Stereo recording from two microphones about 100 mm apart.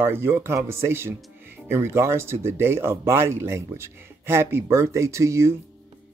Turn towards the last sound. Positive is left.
turn(degrees=-30)  # may be behind; listen again after turning